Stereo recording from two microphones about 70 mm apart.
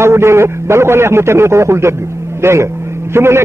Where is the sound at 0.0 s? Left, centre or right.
Right.